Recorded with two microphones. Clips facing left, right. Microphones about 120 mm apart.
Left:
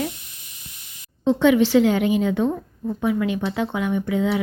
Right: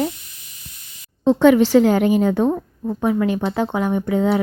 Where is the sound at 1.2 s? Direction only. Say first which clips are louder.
Right 4 dB; 40° right (ahead or behind).